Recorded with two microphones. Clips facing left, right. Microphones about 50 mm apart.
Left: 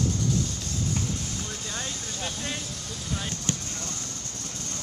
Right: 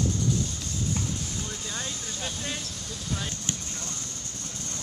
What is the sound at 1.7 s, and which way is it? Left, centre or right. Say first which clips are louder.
Vehicle: left 1 dB; centre.